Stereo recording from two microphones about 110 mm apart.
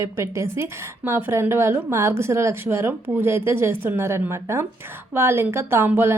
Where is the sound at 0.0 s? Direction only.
25° right (ahead or behind).